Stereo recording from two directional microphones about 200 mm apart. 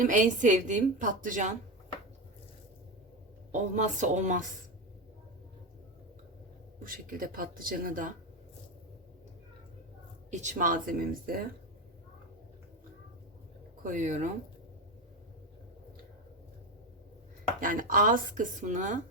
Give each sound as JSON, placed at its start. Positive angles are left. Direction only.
{"t": 0.0, "sound": "a woman's voice", "side_deg": -40}
{"t": 3.5, "sound": "a woman's voice", "side_deg": -35}
{"t": 6.8, "sound": "speech", "side_deg": -45}
{"t": 10.3, "sound": "a woman's voice", "side_deg": -35}
{"t": 13.8, "sound": "a woman's voice", "side_deg": -40}
{"t": 17.6, "sound": "a woman's voice", "side_deg": -40}